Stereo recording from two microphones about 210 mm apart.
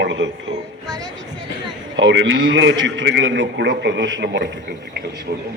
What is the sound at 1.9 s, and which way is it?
A man's voice, 65° right (ahead or behind).